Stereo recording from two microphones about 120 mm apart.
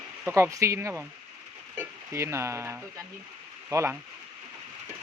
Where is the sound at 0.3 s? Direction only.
20° right (ahead or behind).